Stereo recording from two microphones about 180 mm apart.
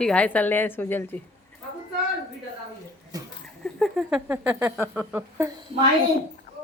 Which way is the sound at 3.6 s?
5° left (ahead or behind).